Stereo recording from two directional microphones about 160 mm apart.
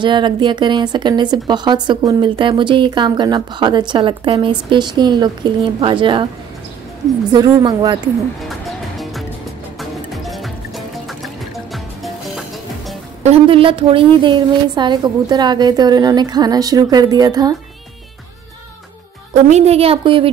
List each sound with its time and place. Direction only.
0.0 s speech: 30° right (ahead or behind)
7.3 s speech: 25° right (ahead or behind)
8.5 s music: centre (ahead or behind)
13.2 s speech: 40° right (ahead or behind)
19.3 s a woman's voice: 40° right (ahead or behind)